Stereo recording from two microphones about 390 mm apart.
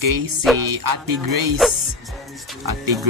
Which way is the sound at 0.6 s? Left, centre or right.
Right.